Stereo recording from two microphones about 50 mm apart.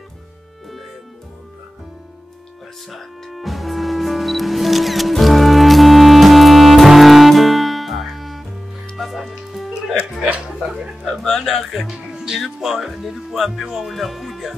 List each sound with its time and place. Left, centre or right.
2.9 s music: centre
10.3 s chuckle: centre
11.2 s music: centre
12.4 s speech: centre